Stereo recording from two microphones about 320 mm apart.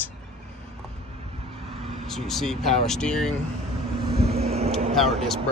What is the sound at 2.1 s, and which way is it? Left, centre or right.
Speech, centre.